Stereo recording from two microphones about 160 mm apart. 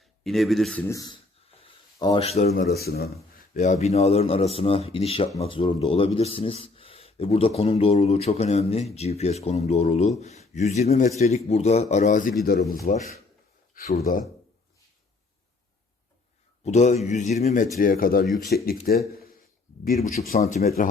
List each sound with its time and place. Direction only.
0.3 s speech: centre (ahead or behind)
0.9 s a sound: 25° left (ahead or behind)
2.2 s a man's voice: 40° left (ahead or behind)
2.6 s a man's voice: 75° left (ahead or behind); by 13.9 s 60° left (ahead or behind)
16.6 s speech: 45° left (ahead or behind)
17.7 s speech: 60° left (ahead or behind)
20.1 s speech: 65° left (ahead or behind)